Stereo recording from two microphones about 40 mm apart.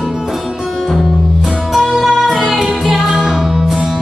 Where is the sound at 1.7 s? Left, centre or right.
Centre.